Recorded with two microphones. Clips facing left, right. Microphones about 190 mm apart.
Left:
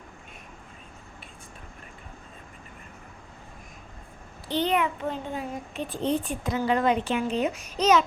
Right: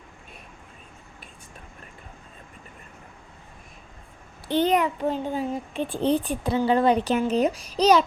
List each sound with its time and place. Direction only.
4.4 s a child's voice: 50° right (ahead or behind)